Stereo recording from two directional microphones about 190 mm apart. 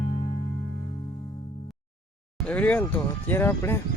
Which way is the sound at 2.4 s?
5° left (ahead or behind).